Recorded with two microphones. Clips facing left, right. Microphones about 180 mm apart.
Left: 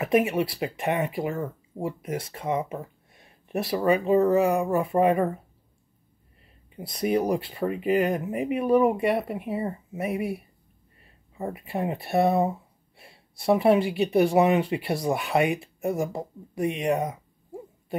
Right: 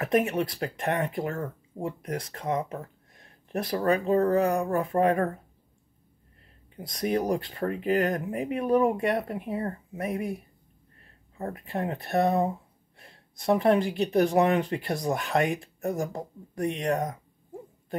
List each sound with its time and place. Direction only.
0.0 s speech: 5° left (ahead or behind)
6.7 s speech: 5° left (ahead or behind)